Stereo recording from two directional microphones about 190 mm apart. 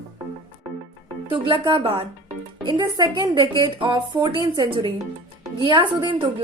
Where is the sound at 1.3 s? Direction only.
25° right (ahead or behind).